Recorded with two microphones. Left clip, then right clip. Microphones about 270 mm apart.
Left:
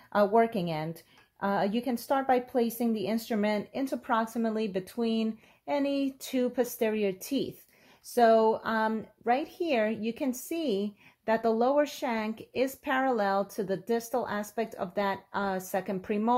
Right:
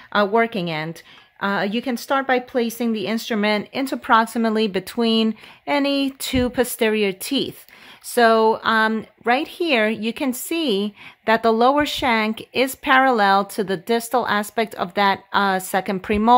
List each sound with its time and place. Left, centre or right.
0.1 s speech: centre